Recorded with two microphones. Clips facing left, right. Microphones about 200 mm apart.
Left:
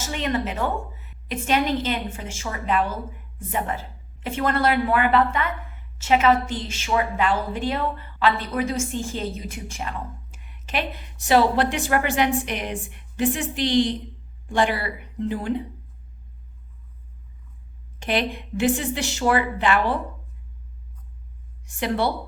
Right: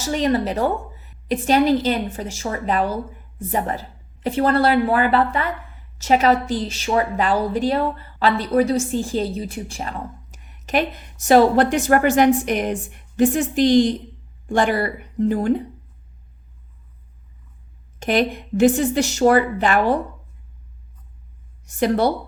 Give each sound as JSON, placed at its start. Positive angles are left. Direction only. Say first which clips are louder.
{"t": 0.0, "sound": "a woman's voice", "louder": "right 6 dB", "side_deg": -35}
{"t": 18.0, "sound": "speech", "louder": "right 5 dB", "side_deg": -45}
{"t": 21.7, "sound": "a woman's voice", "louder": "right 5 dB", "side_deg": -40}